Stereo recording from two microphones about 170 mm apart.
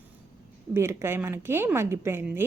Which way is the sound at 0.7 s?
15° right (ahead or behind).